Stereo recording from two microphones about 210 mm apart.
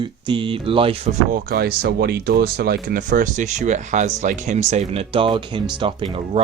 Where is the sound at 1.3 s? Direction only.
45° right (ahead or behind).